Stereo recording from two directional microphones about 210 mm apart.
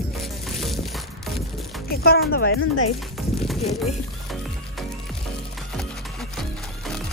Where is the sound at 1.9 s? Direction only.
45° left (ahead or behind).